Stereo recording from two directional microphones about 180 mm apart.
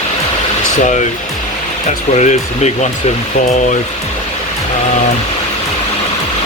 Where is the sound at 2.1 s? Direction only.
40° left (ahead or behind).